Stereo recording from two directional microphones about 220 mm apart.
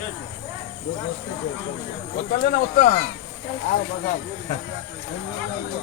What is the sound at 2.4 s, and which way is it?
Speech, 40° left (ahead or behind).